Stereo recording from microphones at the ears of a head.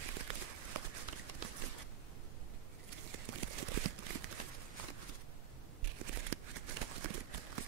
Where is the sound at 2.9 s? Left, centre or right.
Right.